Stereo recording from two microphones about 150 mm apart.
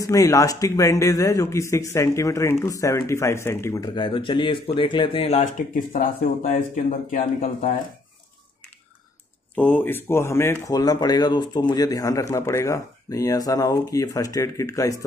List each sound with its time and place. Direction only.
0.0 s speech: 20° left (ahead or behind); by 7.7 s 65° left (ahead or behind)
9.6 s speech: 10° left (ahead or behind)